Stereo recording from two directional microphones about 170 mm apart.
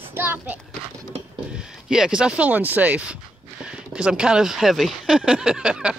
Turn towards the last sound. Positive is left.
turn(degrees=-5)  # may be behind; listen again after turning